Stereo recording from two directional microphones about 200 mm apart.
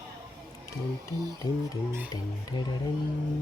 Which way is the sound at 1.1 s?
20° right (ahead or behind).